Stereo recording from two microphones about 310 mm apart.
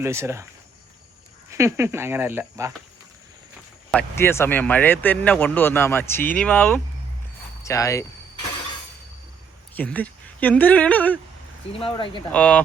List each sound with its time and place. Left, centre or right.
0.0 s speech: centre
1.5 s speech: centre
3.9 s speech: centre
9.7 s speech: centre
11.8 s speech: centre
12.3 s speech: centre